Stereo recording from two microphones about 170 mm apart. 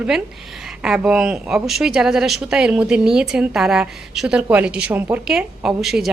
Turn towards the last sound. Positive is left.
turn(degrees=0)  # may be behind; listen again after turning